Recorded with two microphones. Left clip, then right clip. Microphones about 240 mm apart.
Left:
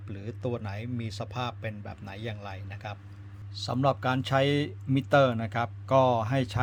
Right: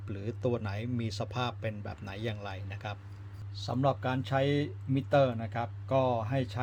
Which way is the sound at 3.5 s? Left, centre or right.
Centre.